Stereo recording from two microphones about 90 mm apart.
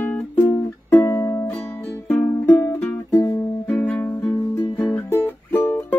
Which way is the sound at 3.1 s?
35° left (ahead or behind).